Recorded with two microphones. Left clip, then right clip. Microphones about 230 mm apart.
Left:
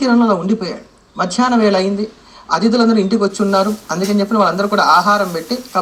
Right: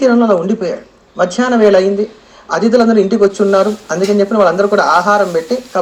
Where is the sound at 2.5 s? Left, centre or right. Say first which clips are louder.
Right 4 dB; centre.